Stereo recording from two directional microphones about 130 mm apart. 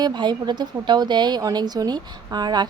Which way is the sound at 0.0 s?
35° right (ahead or behind).